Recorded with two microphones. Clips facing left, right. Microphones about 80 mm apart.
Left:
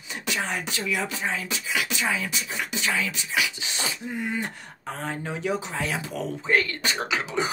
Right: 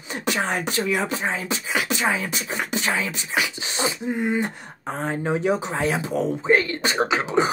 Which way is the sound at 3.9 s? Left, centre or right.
Right.